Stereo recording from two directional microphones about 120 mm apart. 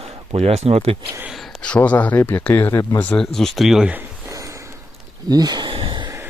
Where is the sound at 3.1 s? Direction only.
5° left (ahead or behind).